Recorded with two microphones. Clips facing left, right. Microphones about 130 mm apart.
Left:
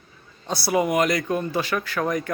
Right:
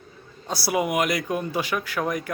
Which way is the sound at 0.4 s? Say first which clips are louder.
Left 2 dB; 5° right (ahead or behind).